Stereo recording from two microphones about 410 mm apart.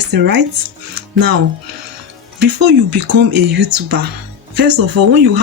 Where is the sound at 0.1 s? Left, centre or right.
Right.